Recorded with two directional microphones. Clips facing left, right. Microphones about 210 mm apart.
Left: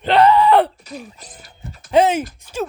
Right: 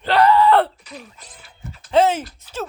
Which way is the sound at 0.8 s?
45° left (ahead or behind).